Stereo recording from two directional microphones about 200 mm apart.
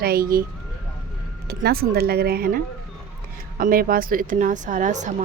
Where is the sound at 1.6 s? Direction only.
50° right (ahead or behind).